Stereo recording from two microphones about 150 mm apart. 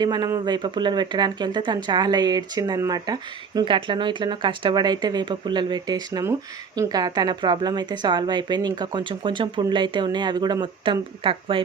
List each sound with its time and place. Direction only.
0.0 s speech: 25° right (ahead or behind)